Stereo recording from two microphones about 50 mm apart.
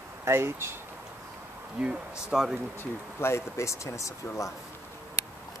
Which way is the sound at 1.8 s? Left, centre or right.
Centre.